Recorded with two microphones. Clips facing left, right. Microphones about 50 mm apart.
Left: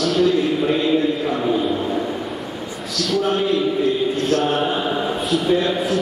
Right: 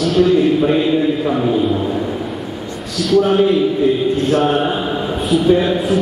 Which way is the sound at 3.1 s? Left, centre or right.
Centre.